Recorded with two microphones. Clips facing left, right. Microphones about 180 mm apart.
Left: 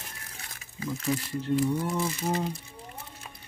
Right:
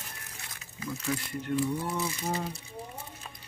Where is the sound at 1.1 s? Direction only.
30° left (ahead or behind).